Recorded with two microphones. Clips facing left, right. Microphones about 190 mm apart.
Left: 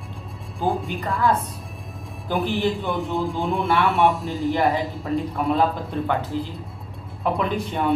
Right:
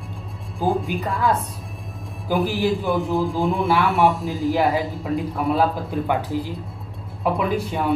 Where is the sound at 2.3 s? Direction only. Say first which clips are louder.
Right 2 dB; centre (ahead or behind).